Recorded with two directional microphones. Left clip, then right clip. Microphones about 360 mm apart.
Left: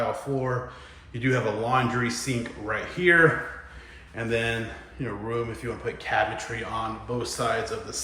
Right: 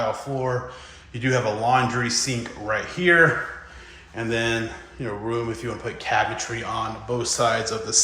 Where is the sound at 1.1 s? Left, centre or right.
Centre.